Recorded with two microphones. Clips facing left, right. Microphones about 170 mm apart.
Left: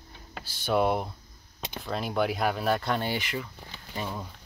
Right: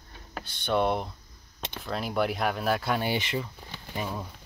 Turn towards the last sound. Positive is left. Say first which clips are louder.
# right 1 dB
turn(degrees=-5)  # may be behind; listen again after turning